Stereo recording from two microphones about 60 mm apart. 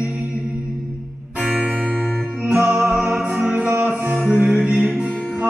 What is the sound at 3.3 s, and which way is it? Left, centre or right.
Music, right.